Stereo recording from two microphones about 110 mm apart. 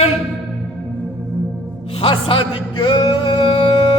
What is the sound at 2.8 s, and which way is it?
Music, 50° left (ahead or behind).